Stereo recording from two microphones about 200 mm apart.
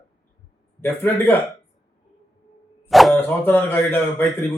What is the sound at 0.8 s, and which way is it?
Speech, 10° left (ahead or behind).